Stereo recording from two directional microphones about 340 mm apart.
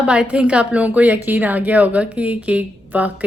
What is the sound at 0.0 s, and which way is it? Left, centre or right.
A woman's voice, centre.